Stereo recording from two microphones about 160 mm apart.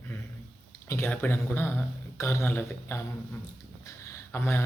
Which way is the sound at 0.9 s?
10° left (ahead or behind).